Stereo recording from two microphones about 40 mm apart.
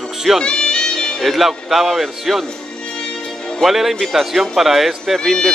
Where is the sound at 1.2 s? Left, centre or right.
Centre.